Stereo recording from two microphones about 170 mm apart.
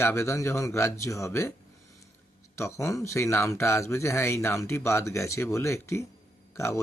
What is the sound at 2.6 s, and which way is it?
Speech, 15° left (ahead or behind).